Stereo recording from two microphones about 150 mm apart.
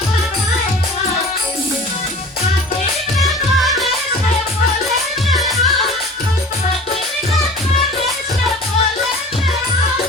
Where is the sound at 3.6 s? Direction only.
Centre (ahead or behind).